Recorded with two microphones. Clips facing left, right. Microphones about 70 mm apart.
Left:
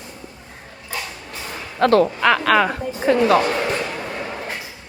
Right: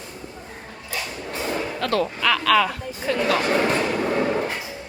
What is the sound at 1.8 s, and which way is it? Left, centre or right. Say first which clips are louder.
Speech: left 9 dB; left.